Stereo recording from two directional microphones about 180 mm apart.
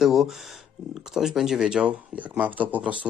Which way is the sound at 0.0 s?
Centre (ahead or behind).